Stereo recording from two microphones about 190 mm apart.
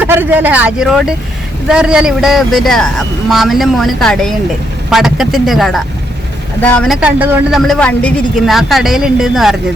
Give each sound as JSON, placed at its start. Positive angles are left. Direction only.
{"t": 0.0, "sound": "speech", "side_deg": -10}
{"t": 7.7, "sound": "speech", "side_deg": 5}